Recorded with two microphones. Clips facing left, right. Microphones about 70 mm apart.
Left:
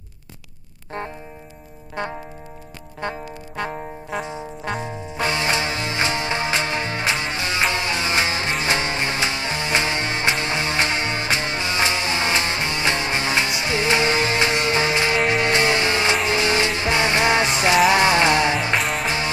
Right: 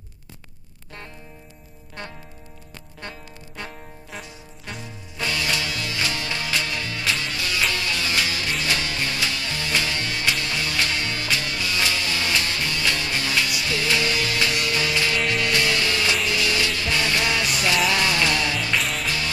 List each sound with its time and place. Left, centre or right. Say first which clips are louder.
3.0 s music: left 10 dB; left
4.2 s trombone: left 11 dB; left
4.8 s music: left 1 dB; left
18.8 s music: left 3 dB; centre
19.0 s music: left 4 dB; left